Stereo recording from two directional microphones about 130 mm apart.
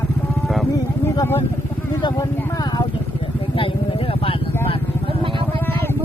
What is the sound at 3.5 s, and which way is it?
Vehicle, 45° left (ahead or behind).